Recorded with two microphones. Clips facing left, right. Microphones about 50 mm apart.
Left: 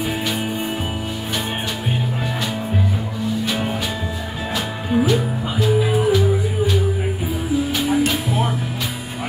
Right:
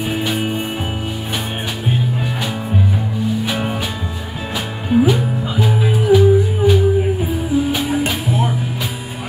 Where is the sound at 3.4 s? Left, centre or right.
Centre.